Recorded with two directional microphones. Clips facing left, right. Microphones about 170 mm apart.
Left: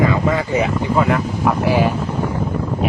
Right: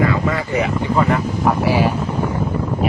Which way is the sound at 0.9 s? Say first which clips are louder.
Even; centre (ahead or behind).